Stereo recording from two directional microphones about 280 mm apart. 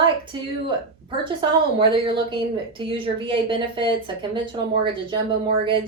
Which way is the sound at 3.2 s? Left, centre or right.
Centre.